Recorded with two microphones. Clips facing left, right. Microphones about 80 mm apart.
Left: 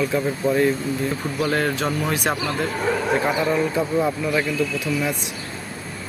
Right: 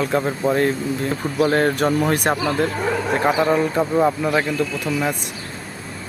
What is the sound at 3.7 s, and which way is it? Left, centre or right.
Speech, right.